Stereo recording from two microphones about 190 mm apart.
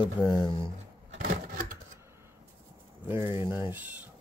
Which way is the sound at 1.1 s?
45° right (ahead or behind).